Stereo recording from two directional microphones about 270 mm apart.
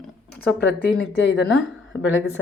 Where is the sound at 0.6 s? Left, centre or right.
Left.